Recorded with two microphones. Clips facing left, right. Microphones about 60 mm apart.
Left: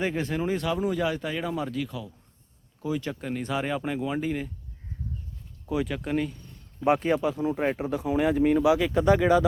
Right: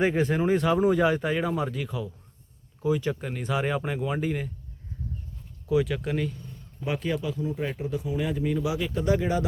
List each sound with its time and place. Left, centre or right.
0.0 s speech: centre
5.6 s speech: centre
6.8 s speech: left
8.6 s speech: left
9.0 s speech: left